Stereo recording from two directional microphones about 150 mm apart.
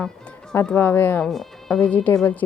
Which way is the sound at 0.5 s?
10° left (ahead or behind).